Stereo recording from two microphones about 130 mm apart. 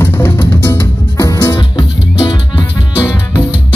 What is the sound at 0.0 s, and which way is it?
Music, 20° left (ahead or behind).